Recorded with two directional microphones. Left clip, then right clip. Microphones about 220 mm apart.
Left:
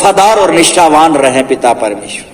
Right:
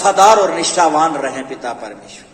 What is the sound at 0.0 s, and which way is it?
A man's voice, 50° left (ahead or behind).